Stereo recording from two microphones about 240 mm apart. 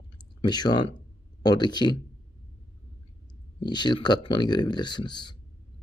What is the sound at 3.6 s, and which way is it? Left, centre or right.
A man's voice, centre.